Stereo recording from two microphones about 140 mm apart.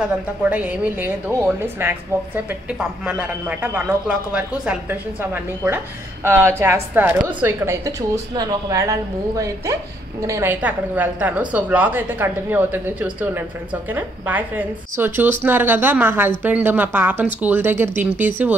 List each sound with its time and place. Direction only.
0.0 s a woman's voice: 10° right (ahead or behind)
10.2 s a woman's voice: 20° right (ahead or behind)